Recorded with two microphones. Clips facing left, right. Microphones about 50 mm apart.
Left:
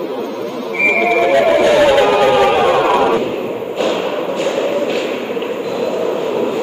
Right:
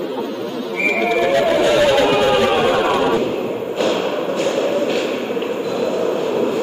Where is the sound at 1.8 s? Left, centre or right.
Centre.